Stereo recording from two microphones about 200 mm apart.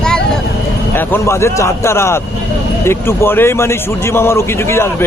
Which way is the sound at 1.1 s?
15° left (ahead or behind).